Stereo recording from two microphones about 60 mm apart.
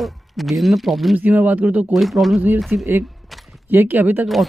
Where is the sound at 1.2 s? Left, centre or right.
Right.